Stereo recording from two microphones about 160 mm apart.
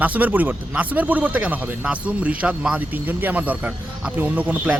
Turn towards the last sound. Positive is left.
turn(degrees=-10)  # may be behind; listen again after turning